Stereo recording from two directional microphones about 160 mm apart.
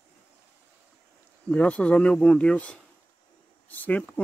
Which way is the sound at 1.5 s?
10° left (ahead or behind).